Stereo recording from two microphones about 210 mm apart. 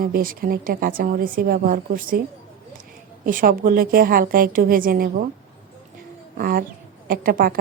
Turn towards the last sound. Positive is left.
turn(degrees=-45)  # may be behind; listen again after turning